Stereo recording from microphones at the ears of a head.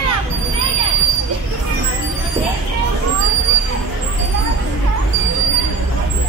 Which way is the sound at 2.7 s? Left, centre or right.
Right.